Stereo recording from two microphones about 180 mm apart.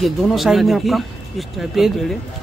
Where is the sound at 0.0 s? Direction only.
Centre (ahead or behind).